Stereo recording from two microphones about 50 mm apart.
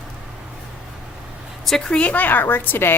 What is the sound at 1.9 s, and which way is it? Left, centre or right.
A woman's voice, left.